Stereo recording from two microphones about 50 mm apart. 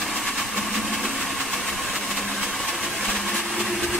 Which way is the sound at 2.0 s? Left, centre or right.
Centre.